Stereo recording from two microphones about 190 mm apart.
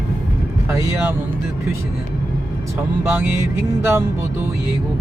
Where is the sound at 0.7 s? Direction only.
15° right (ahead or behind).